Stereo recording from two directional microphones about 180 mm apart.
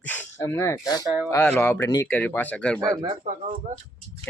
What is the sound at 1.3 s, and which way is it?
Speech, 10° left (ahead or behind).